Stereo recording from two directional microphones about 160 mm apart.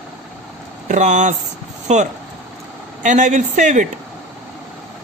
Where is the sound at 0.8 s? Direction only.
50° right (ahead or behind).